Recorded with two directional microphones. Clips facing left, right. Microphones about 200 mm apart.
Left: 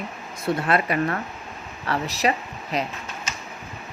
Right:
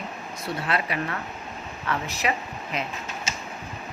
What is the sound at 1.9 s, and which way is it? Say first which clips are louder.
Speech: left 4 dB; 35° left (ahead or behind).